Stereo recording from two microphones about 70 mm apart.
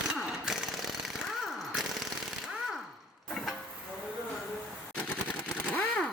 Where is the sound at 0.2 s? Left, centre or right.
Centre.